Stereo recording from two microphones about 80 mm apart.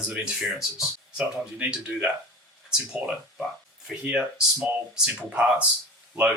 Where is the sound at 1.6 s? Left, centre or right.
Centre.